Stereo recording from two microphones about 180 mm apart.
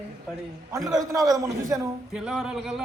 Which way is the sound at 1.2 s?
20° right (ahead or behind).